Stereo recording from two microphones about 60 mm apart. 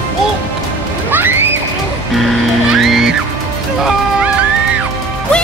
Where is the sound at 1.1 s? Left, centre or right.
Right.